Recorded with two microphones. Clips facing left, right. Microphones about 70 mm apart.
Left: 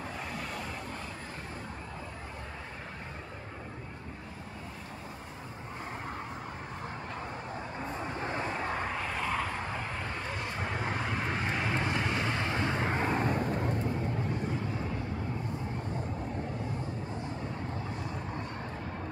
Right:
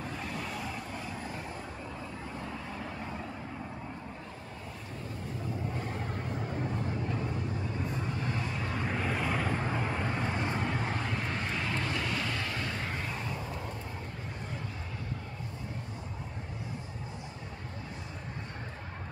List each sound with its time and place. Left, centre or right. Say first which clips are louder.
8.2 s vehicle: left 2 dB; left
8.9 s vehicle: right 1 dB; centre
10.6 s vehicle: right 1 dB; centre
11.4 s vehicle: left 2 dB; left